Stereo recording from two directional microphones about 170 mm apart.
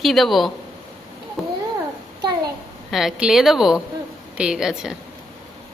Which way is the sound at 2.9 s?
Centre (ahead or behind).